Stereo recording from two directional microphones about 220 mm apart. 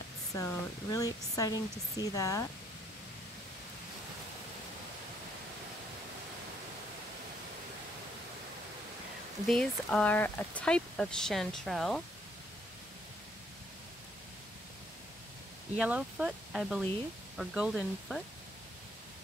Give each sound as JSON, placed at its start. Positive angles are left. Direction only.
{"t": 0.3, "sound": "speech", "side_deg": 15}
{"t": 9.5, "sound": "speech", "side_deg": 5}
{"t": 15.8, "sound": "speech", "side_deg": -5}